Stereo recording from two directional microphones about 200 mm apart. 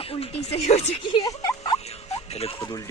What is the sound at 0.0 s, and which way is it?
Speech, 30° left (ahead or behind).